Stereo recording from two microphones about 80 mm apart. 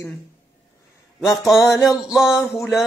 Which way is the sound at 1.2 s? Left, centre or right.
Left.